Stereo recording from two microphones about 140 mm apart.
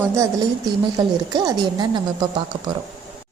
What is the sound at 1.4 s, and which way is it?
Speech, 25° right (ahead or behind).